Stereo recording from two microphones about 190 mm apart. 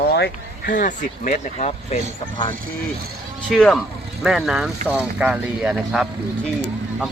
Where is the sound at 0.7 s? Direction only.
40° left (ahead or behind).